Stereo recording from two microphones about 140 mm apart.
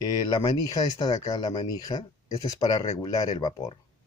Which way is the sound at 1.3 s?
30° left (ahead or behind).